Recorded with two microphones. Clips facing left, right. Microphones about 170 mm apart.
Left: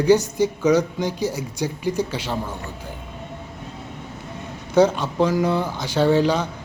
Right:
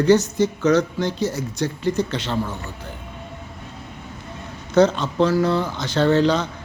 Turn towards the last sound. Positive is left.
turn(degrees=10)  # may be behind; listen again after turning